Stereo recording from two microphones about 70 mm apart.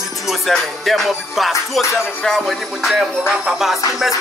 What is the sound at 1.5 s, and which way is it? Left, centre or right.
Music, left.